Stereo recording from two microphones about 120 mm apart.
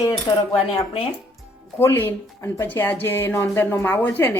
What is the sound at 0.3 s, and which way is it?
Speech, 35° left (ahead or behind).